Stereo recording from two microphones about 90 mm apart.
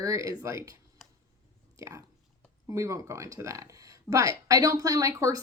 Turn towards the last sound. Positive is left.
turn(degrees=-35)  # may be behind; listen again after turning